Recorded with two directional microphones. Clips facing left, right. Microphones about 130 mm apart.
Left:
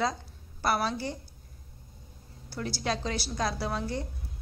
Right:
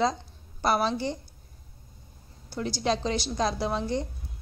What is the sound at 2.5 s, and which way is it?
A woman's voice, 20° right (ahead or behind).